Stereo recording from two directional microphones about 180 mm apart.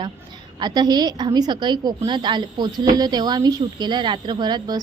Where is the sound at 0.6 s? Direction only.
25° right (ahead or behind).